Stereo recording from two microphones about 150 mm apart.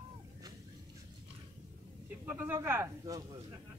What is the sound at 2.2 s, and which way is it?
Speech, 15° right (ahead or behind).